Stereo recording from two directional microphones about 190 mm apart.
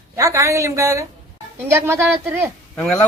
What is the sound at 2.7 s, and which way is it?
Speech, 5° left (ahead or behind).